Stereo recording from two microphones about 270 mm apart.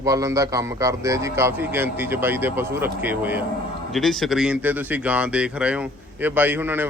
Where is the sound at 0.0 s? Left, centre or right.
Centre.